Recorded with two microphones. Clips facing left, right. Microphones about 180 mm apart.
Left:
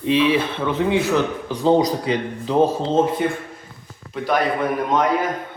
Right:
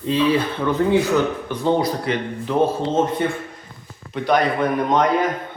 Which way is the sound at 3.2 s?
Centre (ahead or behind).